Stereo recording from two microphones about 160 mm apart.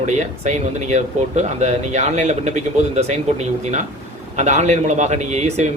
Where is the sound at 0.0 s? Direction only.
50° right (ahead or behind).